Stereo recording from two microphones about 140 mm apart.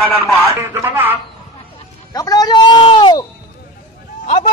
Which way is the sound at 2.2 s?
25° left (ahead or behind).